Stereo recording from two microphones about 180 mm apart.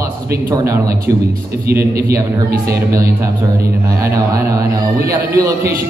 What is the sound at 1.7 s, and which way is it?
Speech, 60° right (ahead or behind).